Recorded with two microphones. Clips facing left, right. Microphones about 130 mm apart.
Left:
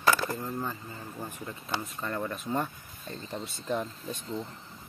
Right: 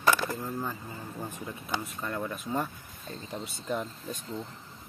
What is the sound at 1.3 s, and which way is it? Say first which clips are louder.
Speech: even; 10° right (ahead or behind).